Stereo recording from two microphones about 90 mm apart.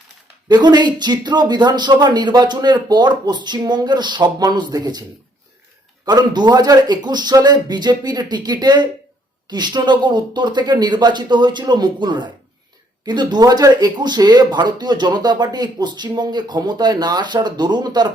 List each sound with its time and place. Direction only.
0.4 s speech: 55° right (ahead or behind)
6.1 s speech: 50° right (ahead or behind)